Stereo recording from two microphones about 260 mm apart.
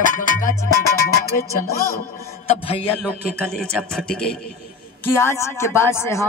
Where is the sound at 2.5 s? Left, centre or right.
Left.